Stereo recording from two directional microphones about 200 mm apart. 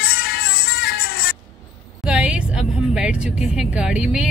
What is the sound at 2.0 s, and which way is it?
A woman's voice, 5° right (ahead or behind).